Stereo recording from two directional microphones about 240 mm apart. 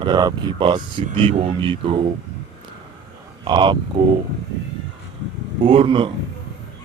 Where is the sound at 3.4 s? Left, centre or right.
Centre.